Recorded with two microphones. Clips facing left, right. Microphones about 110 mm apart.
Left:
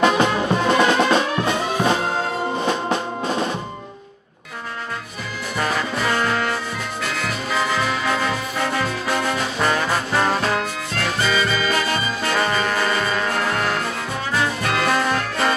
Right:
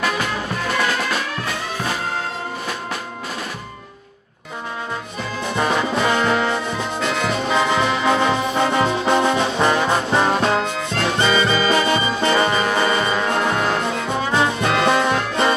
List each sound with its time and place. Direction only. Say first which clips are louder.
0.0 s music: left 6 dB; 25° left (ahead or behind)
2.6 s drum: left 6 dB; 25° left (ahead or behind)
5.6 s music: right 3 dB; 25° right (ahead or behind)
9.8 s trombone: right 3 dB; 25° right (ahead or behind)
10.3 s music: right 3 dB; 25° right (ahead or behind)